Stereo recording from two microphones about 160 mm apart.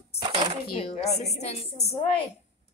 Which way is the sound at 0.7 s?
40° left (ahead or behind).